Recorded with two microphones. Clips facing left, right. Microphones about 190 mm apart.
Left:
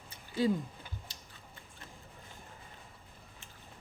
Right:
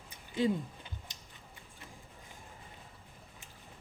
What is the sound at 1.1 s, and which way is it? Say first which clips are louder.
Tick-tock: left 1 dB; 15° right (ahead or behind).